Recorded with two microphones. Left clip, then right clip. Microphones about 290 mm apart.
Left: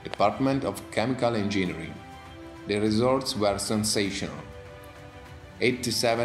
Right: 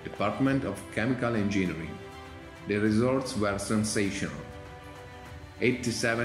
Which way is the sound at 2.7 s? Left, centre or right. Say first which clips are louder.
Left 3 dB; centre.